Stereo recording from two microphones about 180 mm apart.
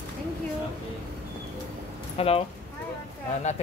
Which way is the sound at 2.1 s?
35° left (ahead or behind).